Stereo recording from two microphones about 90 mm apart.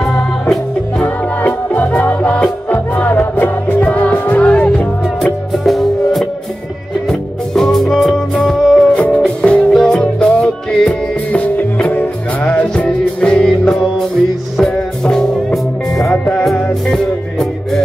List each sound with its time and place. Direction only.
1.0 s music: 20° left (ahead or behind)
5.2 s music: centre (ahead or behind)
11.5 s music: 20° left (ahead or behind); by 17.8 s 5° left (ahead or behind)